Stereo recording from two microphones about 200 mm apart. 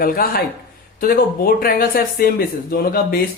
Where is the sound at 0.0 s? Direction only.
50° left (ahead or behind).